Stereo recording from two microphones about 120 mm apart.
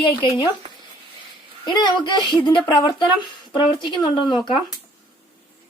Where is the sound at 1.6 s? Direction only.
40° left (ahead or behind).